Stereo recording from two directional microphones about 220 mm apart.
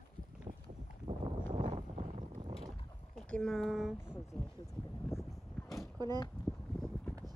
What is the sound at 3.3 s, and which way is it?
Speech, 5° left (ahead or behind).